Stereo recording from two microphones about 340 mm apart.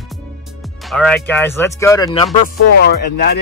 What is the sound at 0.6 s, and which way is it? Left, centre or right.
Speech, centre.